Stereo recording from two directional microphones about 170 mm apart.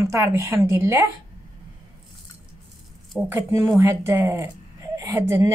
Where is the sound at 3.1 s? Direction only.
10° right (ahead or behind).